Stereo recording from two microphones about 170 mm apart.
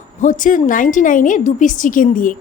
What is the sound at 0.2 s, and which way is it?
A woman's voice, 50° left (ahead or behind).